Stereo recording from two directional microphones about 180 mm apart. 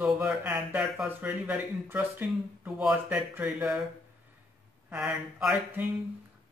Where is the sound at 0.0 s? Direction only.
5° right (ahead or behind).